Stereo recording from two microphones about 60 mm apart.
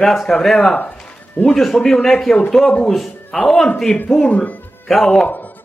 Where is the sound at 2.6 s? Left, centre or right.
Left.